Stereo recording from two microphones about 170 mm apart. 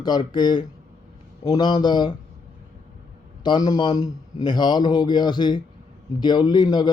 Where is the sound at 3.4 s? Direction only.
25° left (ahead or behind).